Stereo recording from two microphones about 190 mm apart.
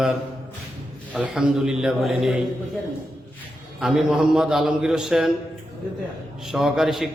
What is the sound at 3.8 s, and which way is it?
A man's voice, centre (ahead or behind).